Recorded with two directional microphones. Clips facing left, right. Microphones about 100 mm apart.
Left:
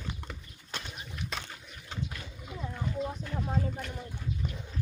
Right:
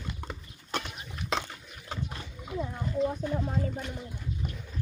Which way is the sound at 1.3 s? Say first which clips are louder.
Right 10 dB; 90° right.